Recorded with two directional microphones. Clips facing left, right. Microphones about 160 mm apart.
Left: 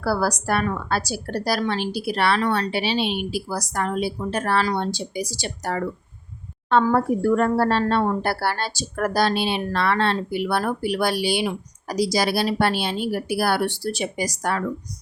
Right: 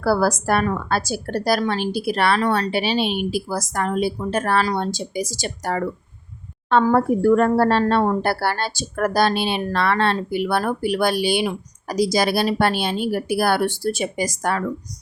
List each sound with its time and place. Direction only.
0.0 s a woman's voice: 50° right (ahead or behind)